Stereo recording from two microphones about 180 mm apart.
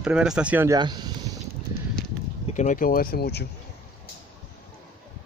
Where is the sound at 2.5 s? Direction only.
45° left (ahead or behind); by 3.4 s 60° left (ahead or behind).